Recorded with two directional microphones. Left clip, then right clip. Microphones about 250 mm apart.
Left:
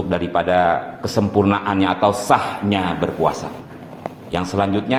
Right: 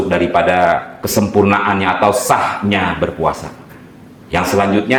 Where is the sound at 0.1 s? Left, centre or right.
Right.